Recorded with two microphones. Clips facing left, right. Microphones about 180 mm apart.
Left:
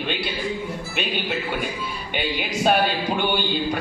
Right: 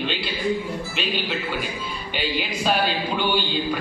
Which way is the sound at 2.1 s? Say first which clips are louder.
Left 1 dB; 55° left (ahead or behind).